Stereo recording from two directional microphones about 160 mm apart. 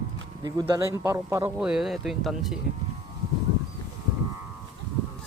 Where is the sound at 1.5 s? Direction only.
5° right (ahead or behind).